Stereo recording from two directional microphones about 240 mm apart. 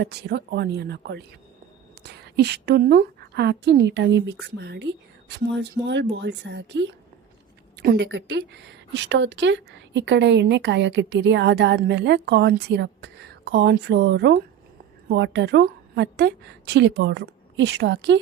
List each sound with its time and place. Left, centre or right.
0.0 s a woman's voice: right